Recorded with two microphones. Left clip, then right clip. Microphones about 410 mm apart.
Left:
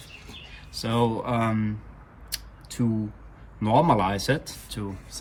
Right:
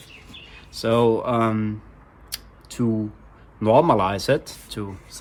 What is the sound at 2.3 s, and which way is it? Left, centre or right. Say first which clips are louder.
Scissors: right 1 dB; centre.